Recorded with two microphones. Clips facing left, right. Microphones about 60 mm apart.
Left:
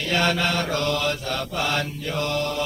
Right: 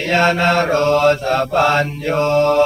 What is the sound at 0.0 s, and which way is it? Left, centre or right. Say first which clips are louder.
Mantra: right 8 dB; right.